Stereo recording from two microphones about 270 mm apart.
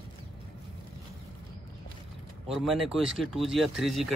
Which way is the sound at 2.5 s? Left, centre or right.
Centre.